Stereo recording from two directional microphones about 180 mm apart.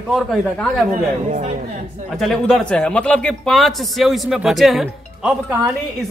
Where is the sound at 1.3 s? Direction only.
45° right (ahead or behind).